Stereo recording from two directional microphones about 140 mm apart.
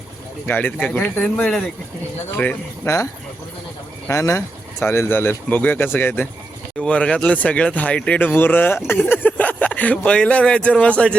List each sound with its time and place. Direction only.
0.4 s speech: 10° left (ahead or behind)
2.8 s speech: 20° left (ahead or behind)
4.1 s speech: 20° left (ahead or behind)